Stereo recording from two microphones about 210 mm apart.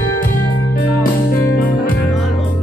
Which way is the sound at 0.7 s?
45° left (ahead or behind).